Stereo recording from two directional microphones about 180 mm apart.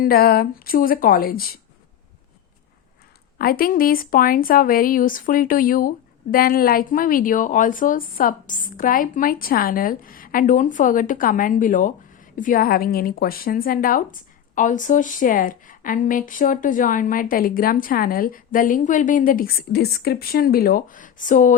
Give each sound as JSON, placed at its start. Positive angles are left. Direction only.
{"t": 0.0, "sound": "speech", "side_deg": 55}
{"t": 3.3, "sound": "a woman's voice", "side_deg": 55}